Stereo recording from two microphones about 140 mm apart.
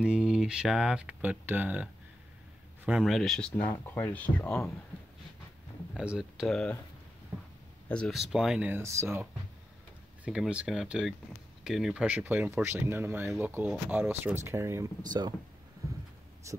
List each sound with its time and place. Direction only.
0.0 s speech: 5° right (ahead or behind)
5.9 s speech: 5° right (ahead or behind)
7.9 s speech: 5° left (ahead or behind); by 9.3 s 20° right (ahead or behind)
10.2 s speech: 10° right (ahead or behind); by 15.3 s 30° right (ahead or behind)
16.5 s speech: 20° right (ahead or behind)